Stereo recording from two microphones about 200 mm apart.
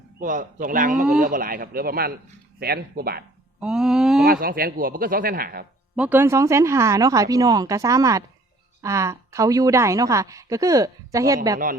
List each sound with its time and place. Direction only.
0.2 s a man's voice: 40° right (ahead or behind)
3.6 s a sound: 5° right (ahead or behind)
4.3 s speech: 45° right (ahead or behind)
6.0 s a woman's voice: 10° right (ahead or behind)